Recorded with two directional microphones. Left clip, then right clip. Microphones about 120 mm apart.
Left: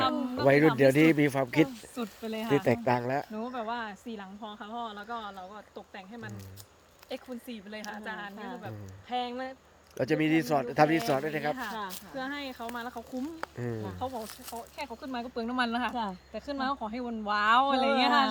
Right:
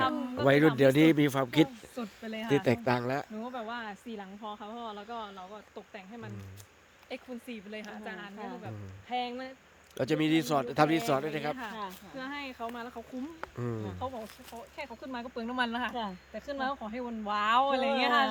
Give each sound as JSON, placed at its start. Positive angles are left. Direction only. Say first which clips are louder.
{"t": 0.0, "sound": "a sound", "louder": "left 1 dB", "side_deg": -5}
{"t": 0.4, "sound": "speech", "louder": "left 1 dB", "side_deg": -40}
{"t": 2.0, "sound": "speech", "louder": "left 3 dB", "side_deg": -5}
{"t": 2.5, "sound": "a man's voice", "louder": "left 1 dB", "side_deg": -30}
{"t": 3.3, "sound": "speech", "louder": "left 4 dB", "side_deg": 0}
{"t": 10.0, "sound": "a man's voice", "louder": "left 1 dB", "side_deg": -25}
{"t": 11.5, "sound": "speech", "louder": "left 3 dB", "side_deg": 5}
{"t": 14.0, "sound": "speech", "louder": "left 2 dB", "side_deg": 0}